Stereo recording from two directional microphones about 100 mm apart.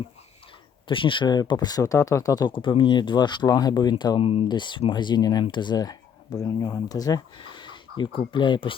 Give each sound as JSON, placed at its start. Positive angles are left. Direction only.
{"t": 0.9, "sound": "speech", "side_deg": 55}
{"t": 4.2, "sound": "speech", "side_deg": 65}
{"t": 4.4, "sound": "speech", "side_deg": 50}
{"t": 7.3, "sound": "speech", "side_deg": 55}